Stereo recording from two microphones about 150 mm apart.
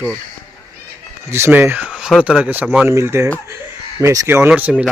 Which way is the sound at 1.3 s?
15° right (ahead or behind).